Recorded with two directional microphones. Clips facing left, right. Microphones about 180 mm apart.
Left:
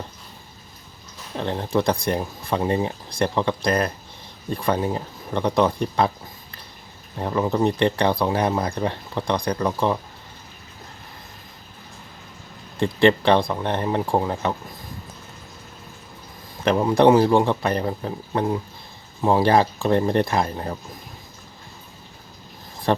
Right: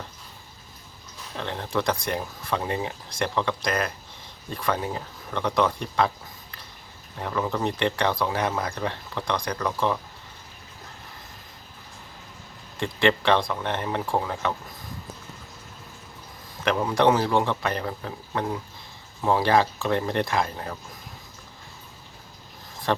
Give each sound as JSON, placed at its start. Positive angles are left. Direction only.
{"t": 1.4, "sound": "speech", "side_deg": 35}
{"t": 7.2, "sound": "speech", "side_deg": 30}
{"t": 12.8, "sound": "speech", "side_deg": 35}
{"t": 16.6, "sound": "speech", "side_deg": 30}